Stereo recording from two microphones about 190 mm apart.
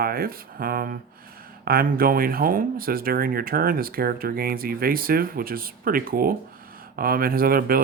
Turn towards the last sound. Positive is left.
turn(degrees=-50)  # may be behind; listen again after turning